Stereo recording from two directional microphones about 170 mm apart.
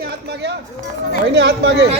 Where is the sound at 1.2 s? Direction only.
90° right.